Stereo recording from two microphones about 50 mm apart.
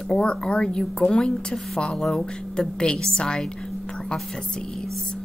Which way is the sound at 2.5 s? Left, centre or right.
Centre.